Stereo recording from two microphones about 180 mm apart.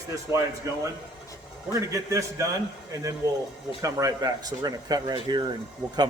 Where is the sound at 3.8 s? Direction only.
20° right (ahead or behind).